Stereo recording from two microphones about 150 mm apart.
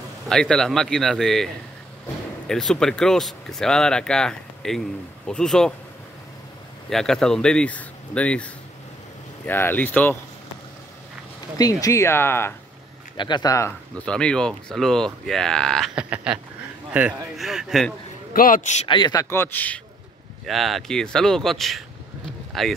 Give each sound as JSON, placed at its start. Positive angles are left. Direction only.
{"t": 0.3, "sound": "speech", "side_deg": 5}
{"t": 6.9, "sound": "speech", "side_deg": 5}
{"t": 9.5, "sound": "speech", "side_deg": 15}
{"t": 11.5, "sound": "speech", "side_deg": 25}
{"t": 13.2, "sound": "speech", "side_deg": 30}
{"t": 13.9, "sound": "speech", "side_deg": 5}
{"t": 18.3, "sound": "a man's voice", "side_deg": 65}
{"t": 18.9, "sound": "speech", "side_deg": 30}
{"t": 19.2, "sound": "speech", "side_deg": 15}
{"t": 20.4, "sound": "speech", "side_deg": 0}